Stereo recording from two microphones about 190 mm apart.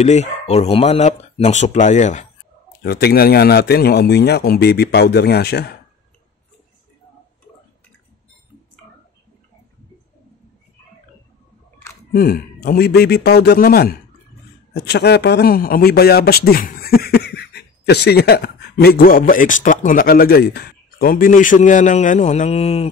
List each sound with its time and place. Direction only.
0.0 s speech: 35° left (ahead or behind)
2.8 s speech: 55° left (ahead or behind)
12.1 s a man's voice: 55° left (ahead or behind); by 22.8 s 30° left (ahead or behind)